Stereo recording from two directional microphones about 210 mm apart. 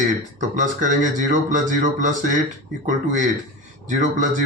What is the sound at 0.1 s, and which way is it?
Speech, 35° right (ahead or behind).